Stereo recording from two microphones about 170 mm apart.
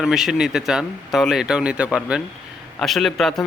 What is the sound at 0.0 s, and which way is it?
Speech, centre (ahead or behind).